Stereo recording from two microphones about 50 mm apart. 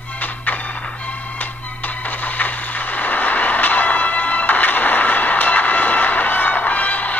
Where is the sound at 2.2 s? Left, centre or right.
Left.